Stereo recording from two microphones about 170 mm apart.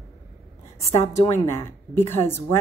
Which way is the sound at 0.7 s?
20° left (ahead or behind).